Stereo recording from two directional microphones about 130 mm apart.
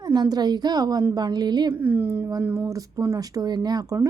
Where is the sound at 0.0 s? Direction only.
30° right (ahead or behind).